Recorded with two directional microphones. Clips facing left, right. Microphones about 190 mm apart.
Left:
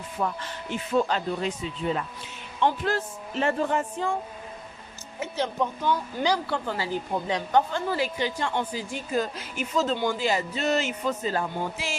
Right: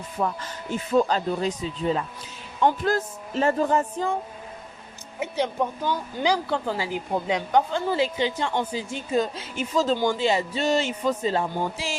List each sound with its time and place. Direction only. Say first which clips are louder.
0.2 s speech: right 2 dB; 35° right (ahead or behind)
5.2 s a woman's voice: right 2 dB; 15° right (ahead or behind); by 11.9 s 30° right (ahead or behind)